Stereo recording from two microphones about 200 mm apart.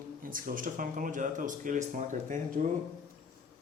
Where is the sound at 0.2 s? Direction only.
45° right (ahead or behind).